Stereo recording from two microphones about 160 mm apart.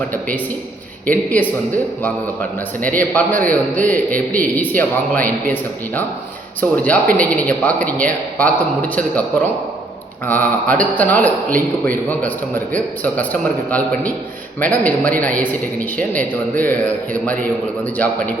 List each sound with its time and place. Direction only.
0.1 s a man's voice: 10° left (ahead or behind)
10.2 s a man's voice: 10° left (ahead or behind)
12.7 s a man's voice: 10° left (ahead or behind)